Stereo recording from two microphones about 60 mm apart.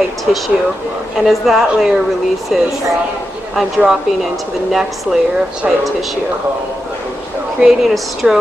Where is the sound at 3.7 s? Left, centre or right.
Centre.